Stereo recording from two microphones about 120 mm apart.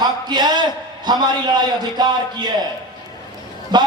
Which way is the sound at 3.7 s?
35° right (ahead or behind).